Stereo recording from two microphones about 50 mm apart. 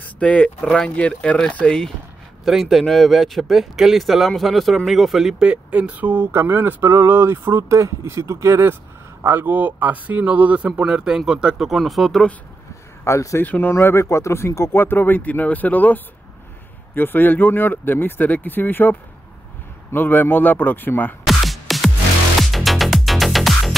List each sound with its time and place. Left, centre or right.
0.0 s speech: left
0.7 s speech: centre
0.9 s speech: left
1.6 s speech: centre
2.4 s speech: centre
5.4 s speech: right
7.7 s speech: right
9.2 s speech: right; by 12.2 s centre
13.0 s speech: left
13.4 s speech: left
14.0 s speech: left
21.3 s music: centre